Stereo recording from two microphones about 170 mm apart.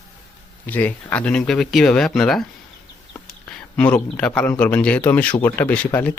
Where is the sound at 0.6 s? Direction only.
10° left (ahead or behind).